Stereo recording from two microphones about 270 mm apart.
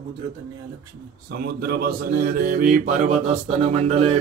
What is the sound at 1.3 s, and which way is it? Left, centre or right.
Speech, right.